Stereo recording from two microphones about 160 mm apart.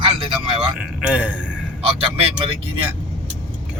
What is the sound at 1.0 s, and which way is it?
Speech, 5° right (ahead or behind).